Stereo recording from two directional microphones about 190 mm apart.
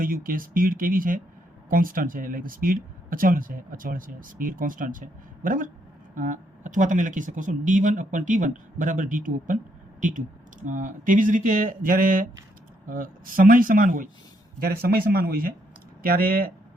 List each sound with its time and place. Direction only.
0.0 s speech: 50° right (ahead or behind)